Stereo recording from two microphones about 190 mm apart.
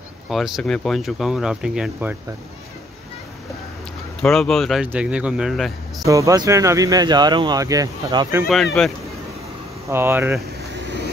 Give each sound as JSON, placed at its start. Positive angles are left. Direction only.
{"t": 0.3, "sound": "speech", "side_deg": 0}
{"t": 4.2, "sound": "speech", "side_deg": 0}
{"t": 6.0, "sound": "speech", "side_deg": -15}
{"t": 8.8, "sound": "speech", "side_deg": 0}
{"t": 9.8, "sound": "speech", "side_deg": -10}